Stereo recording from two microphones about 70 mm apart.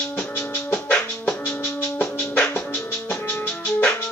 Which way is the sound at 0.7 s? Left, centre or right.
Left.